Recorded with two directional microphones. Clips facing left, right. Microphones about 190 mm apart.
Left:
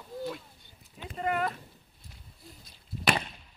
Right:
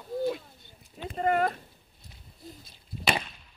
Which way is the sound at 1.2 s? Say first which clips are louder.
Right 5 dB; 40° right (ahead or behind).